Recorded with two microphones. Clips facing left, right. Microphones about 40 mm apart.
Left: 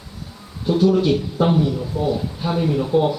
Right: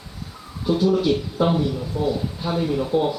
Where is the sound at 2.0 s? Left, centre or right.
Left.